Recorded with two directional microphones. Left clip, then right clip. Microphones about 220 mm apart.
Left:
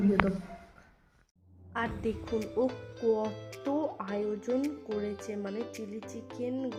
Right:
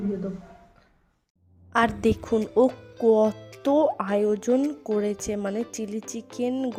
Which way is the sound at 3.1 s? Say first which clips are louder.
Right 10 dB; 45° right (ahead or behind).